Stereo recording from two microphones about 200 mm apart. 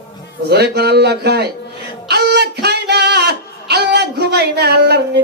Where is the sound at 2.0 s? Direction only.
55° right (ahead or behind).